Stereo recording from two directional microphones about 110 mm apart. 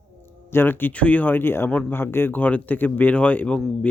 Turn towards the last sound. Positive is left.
turn(degrees=10)  # may be behind; listen again after turning